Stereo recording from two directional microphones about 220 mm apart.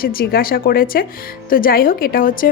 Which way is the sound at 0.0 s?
40° left (ahead or behind).